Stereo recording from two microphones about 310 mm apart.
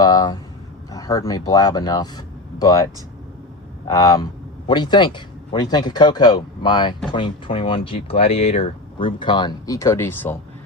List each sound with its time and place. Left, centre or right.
0.0 s speech: centre
3.9 s speech: centre